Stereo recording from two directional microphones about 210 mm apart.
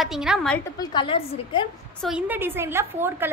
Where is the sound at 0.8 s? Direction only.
20° left (ahead or behind).